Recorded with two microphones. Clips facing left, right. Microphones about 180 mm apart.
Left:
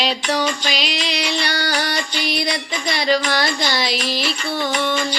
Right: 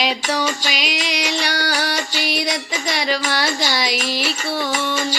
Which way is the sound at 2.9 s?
10° right (ahead or behind).